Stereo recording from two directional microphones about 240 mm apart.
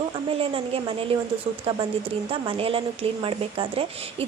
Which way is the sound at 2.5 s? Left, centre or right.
Right.